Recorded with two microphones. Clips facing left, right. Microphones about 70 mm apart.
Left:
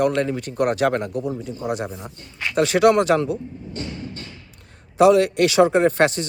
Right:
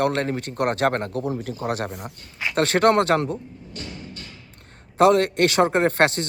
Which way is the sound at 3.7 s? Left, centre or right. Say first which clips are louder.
Left 5 dB; left.